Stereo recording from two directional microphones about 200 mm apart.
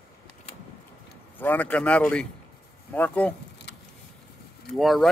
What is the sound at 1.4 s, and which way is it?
A man's voice, 10° left (ahead or behind).